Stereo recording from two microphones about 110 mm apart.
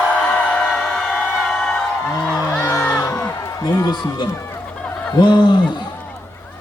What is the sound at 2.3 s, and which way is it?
Music, 30° left (ahead or behind).